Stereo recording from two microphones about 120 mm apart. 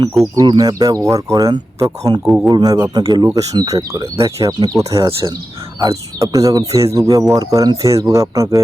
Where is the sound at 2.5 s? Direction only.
30° right (ahead or behind).